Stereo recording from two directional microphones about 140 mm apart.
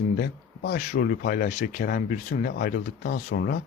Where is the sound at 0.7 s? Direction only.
65° left (ahead or behind); by 3.6 s 90° left.